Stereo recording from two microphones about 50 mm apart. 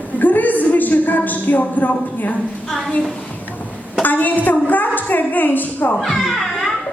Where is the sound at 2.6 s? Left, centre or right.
Centre.